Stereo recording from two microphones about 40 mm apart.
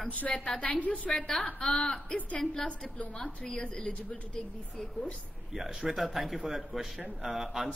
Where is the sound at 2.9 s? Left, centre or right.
Left.